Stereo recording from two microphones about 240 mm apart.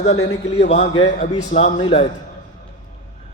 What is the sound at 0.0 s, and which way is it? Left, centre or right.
A man's voice, left.